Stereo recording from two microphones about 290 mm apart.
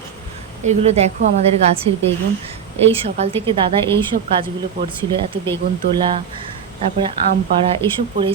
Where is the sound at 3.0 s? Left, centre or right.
Centre.